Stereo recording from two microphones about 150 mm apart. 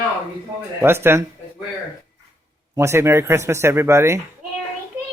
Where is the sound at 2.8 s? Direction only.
20° right (ahead or behind).